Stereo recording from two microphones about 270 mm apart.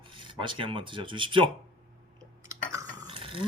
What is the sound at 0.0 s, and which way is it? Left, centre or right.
Speech, centre.